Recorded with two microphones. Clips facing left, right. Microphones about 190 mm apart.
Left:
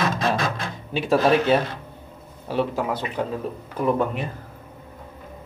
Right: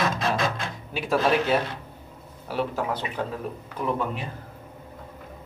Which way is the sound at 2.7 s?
15° left (ahead or behind).